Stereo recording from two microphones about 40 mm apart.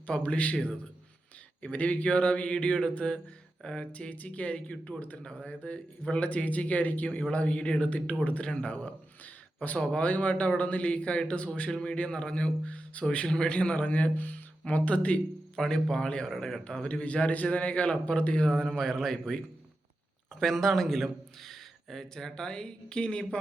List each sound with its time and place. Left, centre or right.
0.2 s speech: left
1.6 s speech: left
5.2 s a man's voice: left
13.2 s a man's voice: centre
13.5 s a man's voice: left
14.2 s speech: left
15.5 s speech: centre
16.7 s speech: left
18.4 s a man's voice: centre
20.4 s a man's voice: centre; by 23.4 s left